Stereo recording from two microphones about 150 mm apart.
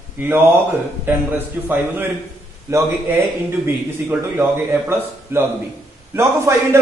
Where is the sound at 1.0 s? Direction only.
15° right (ahead or behind).